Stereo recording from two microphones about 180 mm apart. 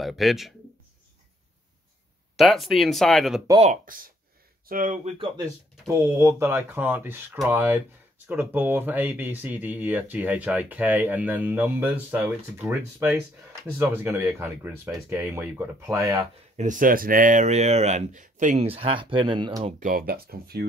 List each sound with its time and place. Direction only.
0.0 s speech: centre (ahead or behind)
2.3 s speech: centre (ahead or behind)
3.6 s speech: 50° right (ahead or behind)
5.4 s speech: 15° right (ahead or behind)
16.5 s speech: 45° right (ahead or behind); by 19.7 s 25° right (ahead or behind)
19.8 s speech: 55° right (ahead or behind)